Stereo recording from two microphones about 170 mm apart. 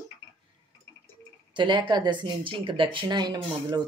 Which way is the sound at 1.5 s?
25° right (ahead or behind).